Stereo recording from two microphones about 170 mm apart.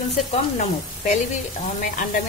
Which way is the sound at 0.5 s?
45° left (ahead or behind).